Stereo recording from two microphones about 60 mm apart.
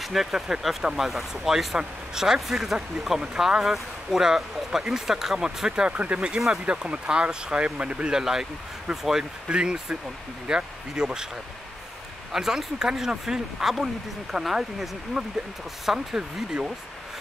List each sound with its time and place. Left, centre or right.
0.0 s speech: centre
12.3 s speech: centre